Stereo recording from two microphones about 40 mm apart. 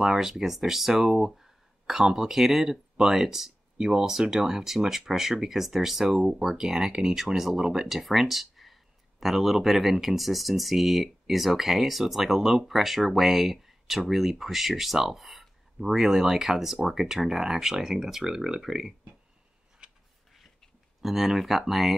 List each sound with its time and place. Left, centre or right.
0.0 s speech: centre
3.7 s speech: centre
4.0 s speech: centre
19.8 s a sound: right
21.0 s speech: centre